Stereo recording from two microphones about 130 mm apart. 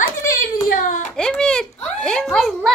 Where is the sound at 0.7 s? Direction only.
90° left.